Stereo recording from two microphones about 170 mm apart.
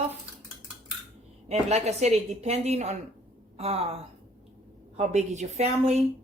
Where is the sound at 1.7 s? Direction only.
40° right (ahead or behind).